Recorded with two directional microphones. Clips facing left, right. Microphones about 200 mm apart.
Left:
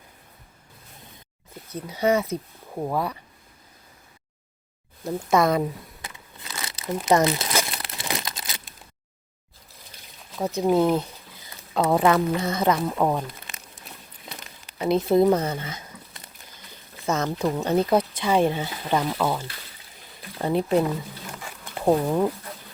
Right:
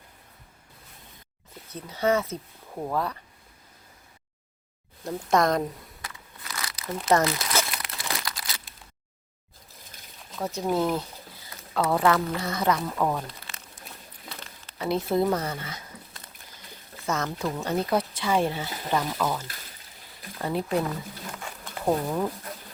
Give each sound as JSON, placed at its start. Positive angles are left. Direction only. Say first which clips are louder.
{"t": 1.7, "sound": "speech", "louder": "left 2 dB", "side_deg": 15}
{"t": 5.0, "sound": "speech", "louder": "left 2 dB", "side_deg": 5}
{"t": 6.0, "sound": "crumpling", "louder": "left 1 dB", "side_deg": 25}
{"t": 7.0, "sound": "speech", "louder": "left 3 dB", "side_deg": 15}
{"t": 7.7, "sound": "crumpling", "louder": "left 3 dB", "side_deg": 25}
{"t": 9.9, "sound": "a sound", "louder": "even", "side_deg": -50}
{"t": 10.4, "sound": "speech", "louder": "left 5 dB", "side_deg": 20}
{"t": 14.3, "sound": "a sound", "louder": "left 1 dB", "side_deg": 20}
{"t": 17.1, "sound": "speech", "louder": "left 4 dB", "side_deg": 25}